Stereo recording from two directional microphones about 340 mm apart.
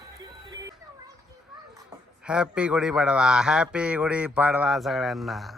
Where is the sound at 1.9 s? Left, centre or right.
Centre.